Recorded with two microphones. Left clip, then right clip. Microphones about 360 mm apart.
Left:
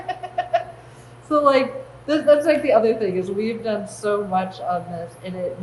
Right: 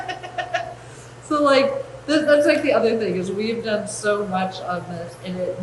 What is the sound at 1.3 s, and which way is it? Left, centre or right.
A woman's voice, centre.